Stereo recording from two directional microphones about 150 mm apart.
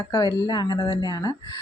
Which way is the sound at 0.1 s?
25° left (ahead or behind).